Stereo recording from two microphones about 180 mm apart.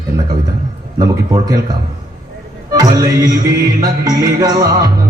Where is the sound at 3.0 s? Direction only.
20° right (ahead or behind).